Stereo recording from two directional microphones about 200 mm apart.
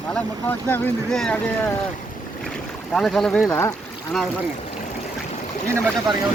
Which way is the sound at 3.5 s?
15° left (ahead or behind).